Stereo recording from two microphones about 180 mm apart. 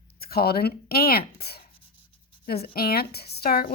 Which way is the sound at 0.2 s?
60° left (ahead or behind).